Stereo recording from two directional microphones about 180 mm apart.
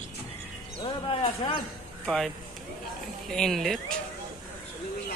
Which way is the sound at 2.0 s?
5° left (ahead or behind).